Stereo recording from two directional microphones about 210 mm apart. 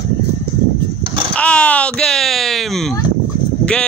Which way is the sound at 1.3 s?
5° left (ahead or behind).